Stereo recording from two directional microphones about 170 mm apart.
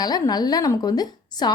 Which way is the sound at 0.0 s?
25° left (ahead or behind).